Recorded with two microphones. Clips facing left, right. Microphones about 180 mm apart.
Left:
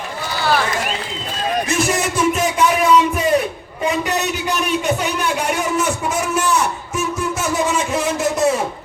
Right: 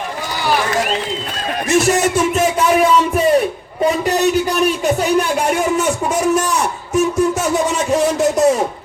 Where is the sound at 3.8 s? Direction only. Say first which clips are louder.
Right 5 dB; 35° right (ahead or behind).